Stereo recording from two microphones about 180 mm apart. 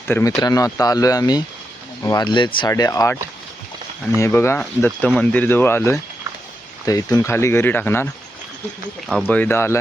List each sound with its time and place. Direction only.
0.1 s speech: 15° left (ahead or behind)
4.2 s speech: 15° left (ahead or behind)
9.0 s speech: 5° left (ahead or behind)